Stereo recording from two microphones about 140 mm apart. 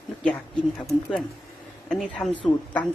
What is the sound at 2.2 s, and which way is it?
Speech, 25° left (ahead or behind).